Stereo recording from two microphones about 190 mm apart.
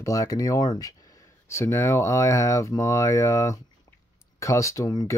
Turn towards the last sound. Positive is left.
turn(degrees=20)  # may be behind; listen again after turning